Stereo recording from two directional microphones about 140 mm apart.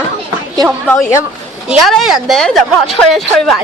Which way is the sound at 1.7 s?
Centre (ahead or behind).